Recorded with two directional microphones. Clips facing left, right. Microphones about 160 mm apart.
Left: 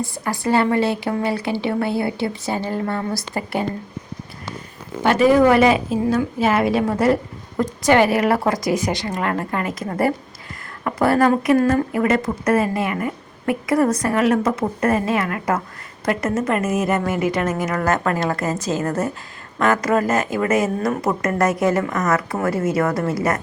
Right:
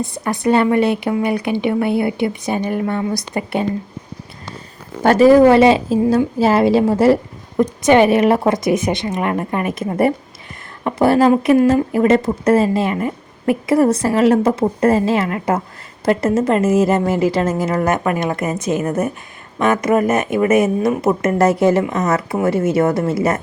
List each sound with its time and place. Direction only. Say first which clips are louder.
0.0 s a woman's voice: right 4 dB; 20° right (ahead or behind)
5.0 s a woman's voice: right 5 dB; 40° right (ahead or behind)